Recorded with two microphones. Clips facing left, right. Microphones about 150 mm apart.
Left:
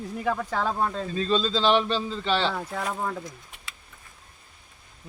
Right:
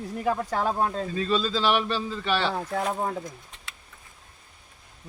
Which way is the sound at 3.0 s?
25° right (ahead or behind).